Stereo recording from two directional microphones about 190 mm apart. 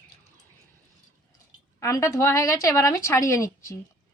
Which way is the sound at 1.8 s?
15° left (ahead or behind).